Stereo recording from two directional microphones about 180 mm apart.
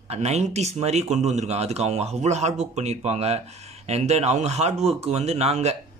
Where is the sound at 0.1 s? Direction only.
40° right (ahead or behind).